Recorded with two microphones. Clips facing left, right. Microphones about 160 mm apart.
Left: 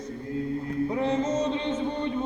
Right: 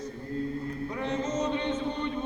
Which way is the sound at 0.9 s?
25° left (ahead or behind).